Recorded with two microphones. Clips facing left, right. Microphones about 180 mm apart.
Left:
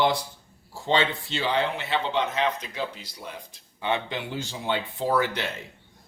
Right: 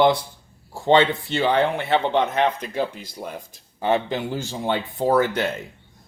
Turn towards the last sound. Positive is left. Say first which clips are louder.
# right 5 dB
turn(degrees=-45)  # may be behind; listen again after turning